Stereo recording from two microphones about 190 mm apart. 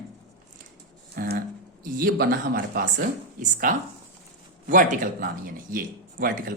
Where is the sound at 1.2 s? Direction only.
50° right (ahead or behind).